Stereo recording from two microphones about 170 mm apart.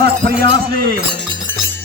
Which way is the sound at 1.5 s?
10° left (ahead or behind).